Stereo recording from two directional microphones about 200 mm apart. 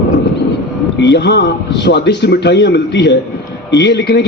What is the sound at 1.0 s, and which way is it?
A man's voice, 60° left (ahead or behind).